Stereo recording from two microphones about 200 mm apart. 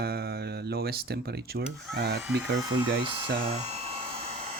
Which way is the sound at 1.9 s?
55° right (ahead or behind).